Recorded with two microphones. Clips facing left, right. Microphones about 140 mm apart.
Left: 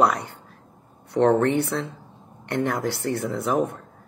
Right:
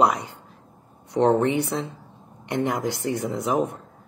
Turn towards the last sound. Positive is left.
turn(degrees=-15)  # may be behind; listen again after turning